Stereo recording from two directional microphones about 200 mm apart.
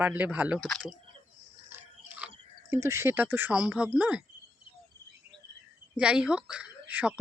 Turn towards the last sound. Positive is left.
turn(degrees=-5)  # may be behind; listen again after turning